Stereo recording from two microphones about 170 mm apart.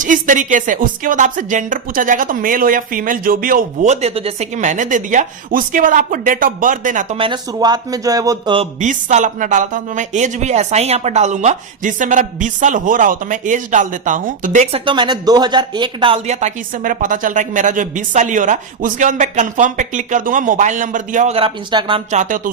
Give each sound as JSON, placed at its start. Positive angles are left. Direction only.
{"t": 0.0, "sound": "speech", "side_deg": -50}
{"t": 4.0, "sound": "speech", "side_deg": -35}
{"t": 7.2, "sound": "speech", "side_deg": -25}
{"t": 8.8, "sound": "speech", "side_deg": -45}
{"t": 14.8, "sound": "speech", "side_deg": -25}
{"t": 21.3, "sound": "speech", "side_deg": -30}
{"t": 22.1, "sound": "speech", "side_deg": -45}